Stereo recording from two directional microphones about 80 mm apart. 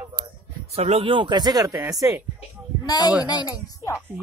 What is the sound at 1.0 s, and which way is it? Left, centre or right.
Speech, right.